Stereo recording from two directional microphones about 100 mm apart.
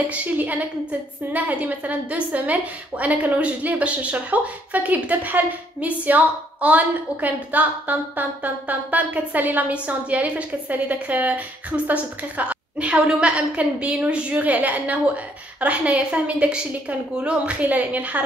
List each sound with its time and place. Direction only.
0.1 s a woman's voice: 15° right (ahead or behind)